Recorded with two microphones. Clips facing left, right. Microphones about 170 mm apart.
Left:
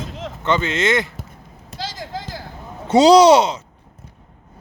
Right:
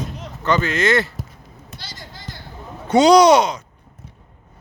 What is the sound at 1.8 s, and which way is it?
Basketball bounce, 90° left.